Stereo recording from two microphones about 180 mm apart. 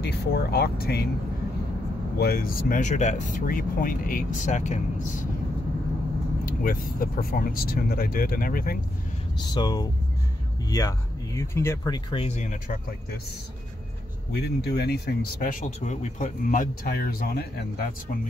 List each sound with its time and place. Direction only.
0.0 s speech: 65° left (ahead or behind)
2.1 s speech: 55° left (ahead or behind)
6.4 s speech: 50° left (ahead or behind)
9.5 s speech: 25° left (ahead or behind)
12.4 s speech: 45° left (ahead or behind)
14.3 s speech: 65° left (ahead or behind)